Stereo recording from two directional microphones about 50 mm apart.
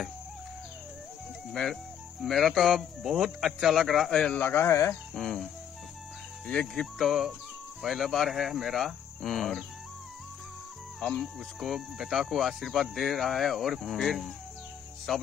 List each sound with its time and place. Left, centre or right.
1.5 s speech: centre
4.4 s speech: left
5.1 s speech: centre
7.1 s speech: centre
11.0 s speech: centre
11.3 s speech: centre